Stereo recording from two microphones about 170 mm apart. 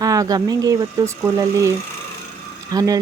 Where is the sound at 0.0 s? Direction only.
20° right (ahead or behind).